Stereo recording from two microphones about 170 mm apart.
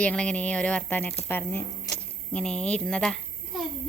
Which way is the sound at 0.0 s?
5° left (ahead or behind).